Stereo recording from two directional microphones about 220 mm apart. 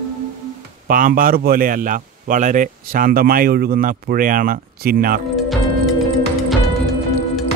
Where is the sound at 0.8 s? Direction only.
40° right (ahead or behind).